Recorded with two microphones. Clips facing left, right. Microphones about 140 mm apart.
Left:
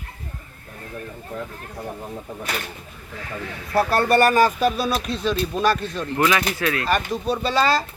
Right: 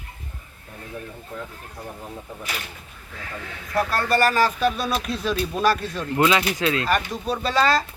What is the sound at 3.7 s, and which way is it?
Speech, 25° left (ahead or behind).